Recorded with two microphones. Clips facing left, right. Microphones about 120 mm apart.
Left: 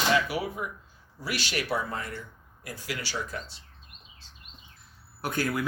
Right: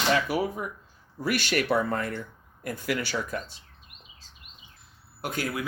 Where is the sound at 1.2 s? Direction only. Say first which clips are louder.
Right 6 dB; 50° right (ahead or behind).